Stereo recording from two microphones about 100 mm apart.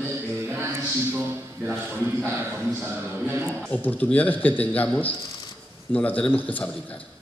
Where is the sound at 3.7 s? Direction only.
15° left (ahead or behind).